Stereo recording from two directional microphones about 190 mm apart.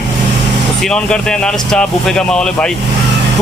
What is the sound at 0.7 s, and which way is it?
Speech, 5° left (ahead or behind).